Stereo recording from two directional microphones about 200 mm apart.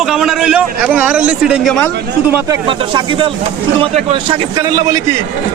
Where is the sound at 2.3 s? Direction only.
20° right (ahead or behind).